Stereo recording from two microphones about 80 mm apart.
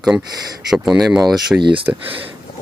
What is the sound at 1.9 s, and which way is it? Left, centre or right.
Speech, right.